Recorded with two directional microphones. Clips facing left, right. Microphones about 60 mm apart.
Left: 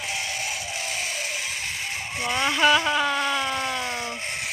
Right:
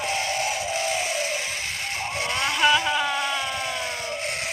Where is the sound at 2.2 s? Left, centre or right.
Left.